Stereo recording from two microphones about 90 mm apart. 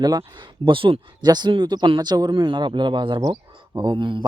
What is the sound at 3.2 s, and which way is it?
Speech, 50° right (ahead or behind).